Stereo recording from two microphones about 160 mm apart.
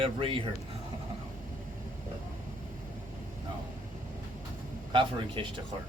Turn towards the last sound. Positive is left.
turn(degrees=-30)  # may be behind; listen again after turning